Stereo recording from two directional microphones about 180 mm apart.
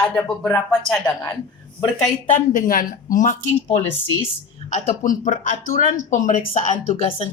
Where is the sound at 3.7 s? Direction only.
15° left (ahead or behind).